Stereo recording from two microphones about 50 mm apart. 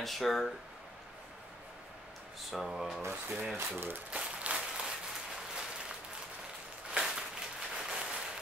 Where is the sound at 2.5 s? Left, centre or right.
Centre.